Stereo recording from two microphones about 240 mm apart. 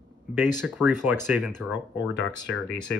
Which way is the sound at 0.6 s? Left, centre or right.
Centre.